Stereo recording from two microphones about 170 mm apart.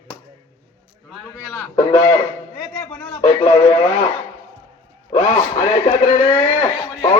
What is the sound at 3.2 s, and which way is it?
Radio, 30° left (ahead or behind).